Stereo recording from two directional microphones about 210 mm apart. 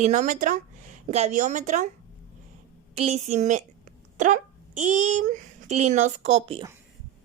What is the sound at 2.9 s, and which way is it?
A woman's voice, 30° right (ahead or behind).